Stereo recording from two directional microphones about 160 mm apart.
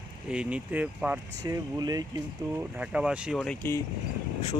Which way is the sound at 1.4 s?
25° right (ahead or behind).